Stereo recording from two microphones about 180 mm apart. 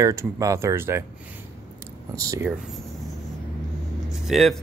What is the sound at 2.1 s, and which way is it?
Speech, 20° right (ahead or behind).